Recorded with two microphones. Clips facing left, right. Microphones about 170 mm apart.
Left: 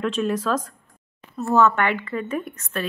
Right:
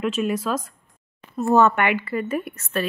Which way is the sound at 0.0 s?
10° right (ahead or behind).